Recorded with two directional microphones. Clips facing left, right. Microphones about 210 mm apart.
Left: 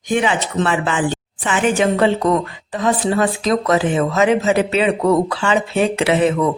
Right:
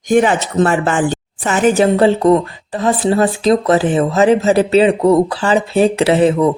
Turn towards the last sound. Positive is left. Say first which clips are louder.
# right 4 dB
turn(degrees=-30)  # may be behind; listen again after turning